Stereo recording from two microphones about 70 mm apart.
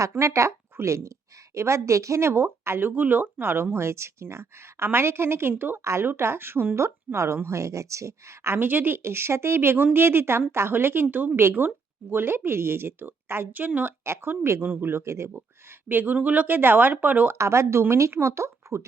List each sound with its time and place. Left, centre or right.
0.2 s speech: right
5.8 s speech: right
8.5 s speech: right
14.0 s speech: right
14.6 s speech: right
15.9 s speech: right
17.3 s speech: right